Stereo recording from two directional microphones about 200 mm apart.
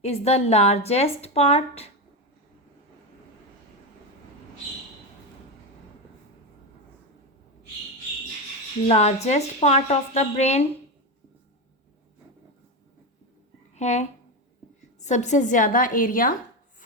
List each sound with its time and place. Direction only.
0.0 s a woman's voice: 30° left (ahead or behind)
8.9 s a woman's voice: 30° left (ahead or behind)
13.7 s a woman's voice: 35° left (ahead or behind)